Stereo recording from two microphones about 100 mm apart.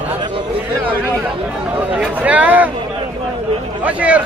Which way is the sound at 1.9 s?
15° right (ahead or behind).